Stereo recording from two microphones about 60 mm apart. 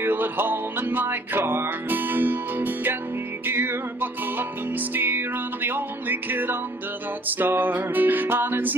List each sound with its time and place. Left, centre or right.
0.0 s music: right